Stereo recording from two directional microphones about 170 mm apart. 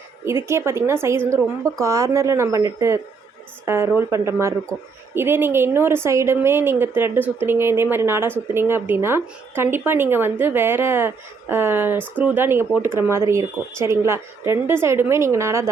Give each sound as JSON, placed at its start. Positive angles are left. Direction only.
{"t": 0.3, "sound": "a woman's voice", "side_deg": -15}